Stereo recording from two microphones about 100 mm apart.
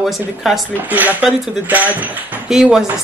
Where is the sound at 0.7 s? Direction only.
15° right (ahead or behind).